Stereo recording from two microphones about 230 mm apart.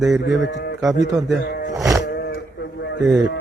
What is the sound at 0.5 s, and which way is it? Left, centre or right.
Speech, left.